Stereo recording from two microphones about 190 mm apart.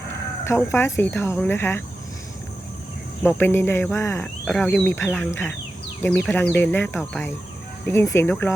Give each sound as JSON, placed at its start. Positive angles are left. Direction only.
{"t": 0.4, "sound": "speech", "side_deg": 15}
{"t": 3.2, "sound": "speech", "side_deg": 10}